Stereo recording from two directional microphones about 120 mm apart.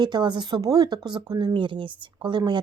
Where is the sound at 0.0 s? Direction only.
40° right (ahead or behind).